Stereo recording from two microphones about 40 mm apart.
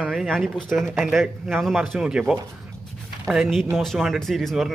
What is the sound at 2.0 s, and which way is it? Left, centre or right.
Speech, centre.